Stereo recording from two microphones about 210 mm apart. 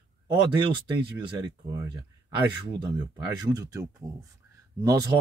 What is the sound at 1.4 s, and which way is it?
Speech, 20° right (ahead or behind).